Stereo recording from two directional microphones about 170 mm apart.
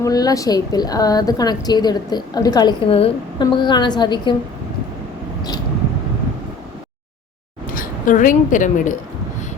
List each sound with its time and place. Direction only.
0.0 s a woman's voice: 20° left (ahead or behind)
7.7 s speech: 55° left (ahead or behind)